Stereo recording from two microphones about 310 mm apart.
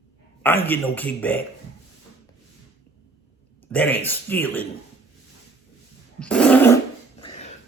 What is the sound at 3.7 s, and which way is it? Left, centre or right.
Speech, centre.